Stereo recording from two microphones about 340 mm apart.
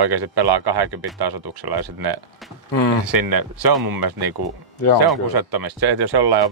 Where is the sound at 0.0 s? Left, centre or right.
Right.